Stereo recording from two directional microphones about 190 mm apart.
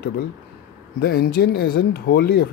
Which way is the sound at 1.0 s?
55° left (ahead or behind).